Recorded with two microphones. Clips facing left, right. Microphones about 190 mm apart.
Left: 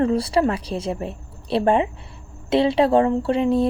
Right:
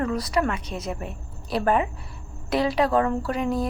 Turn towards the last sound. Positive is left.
turn(degrees=30)  # may be behind; listen again after turning